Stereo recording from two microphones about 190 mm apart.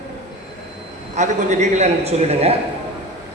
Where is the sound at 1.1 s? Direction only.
40° right (ahead or behind).